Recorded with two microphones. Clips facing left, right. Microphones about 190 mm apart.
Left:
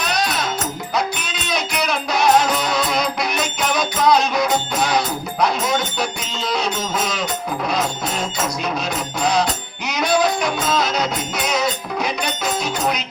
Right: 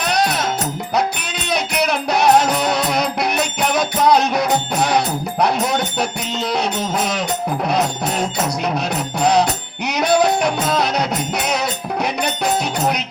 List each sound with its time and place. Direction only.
0.0 s music: 60° right (ahead or behind)
1.5 s music: 60° right (ahead or behind)